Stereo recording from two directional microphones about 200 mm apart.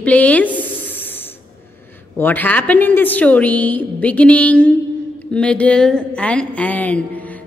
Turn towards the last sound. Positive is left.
turn(degrees=10)  # may be behind; listen again after turning